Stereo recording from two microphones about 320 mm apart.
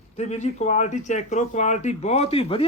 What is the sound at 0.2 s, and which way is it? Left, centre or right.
Speech, left.